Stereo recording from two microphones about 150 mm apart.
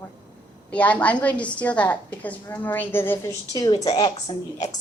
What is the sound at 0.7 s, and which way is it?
A woman's voice, 10° left (ahead or behind).